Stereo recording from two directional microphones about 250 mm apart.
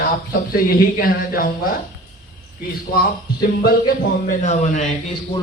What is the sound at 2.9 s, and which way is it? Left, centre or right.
Speech, left.